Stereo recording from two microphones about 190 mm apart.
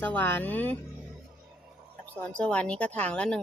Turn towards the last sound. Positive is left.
turn(degrees=5)  # may be behind; listen again after turning